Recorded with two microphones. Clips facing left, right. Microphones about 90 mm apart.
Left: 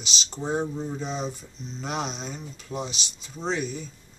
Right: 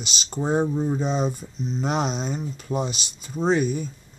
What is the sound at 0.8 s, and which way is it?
Speech, 40° right (ahead or behind).